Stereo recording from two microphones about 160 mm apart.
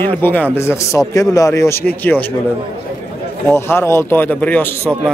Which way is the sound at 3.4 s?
15° left (ahead or behind).